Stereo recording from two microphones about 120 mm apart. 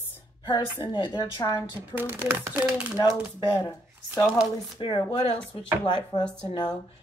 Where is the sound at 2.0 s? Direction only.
15° right (ahead or behind).